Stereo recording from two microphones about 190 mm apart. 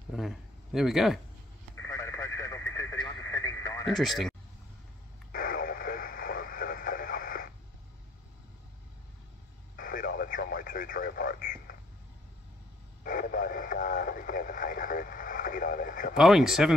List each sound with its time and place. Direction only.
0.1 s speech: centre (ahead or behind)
1.9 s radio: 15° left (ahead or behind)
3.8 s speech: centre (ahead or behind)
5.3 s radio: 50° left (ahead or behind)
9.8 s radio: 50° left (ahead or behind)
13.0 s radio: 45° left (ahead or behind)
16.2 s speech: centre (ahead or behind)